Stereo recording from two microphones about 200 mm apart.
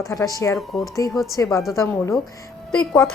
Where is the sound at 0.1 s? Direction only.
15° left (ahead or behind).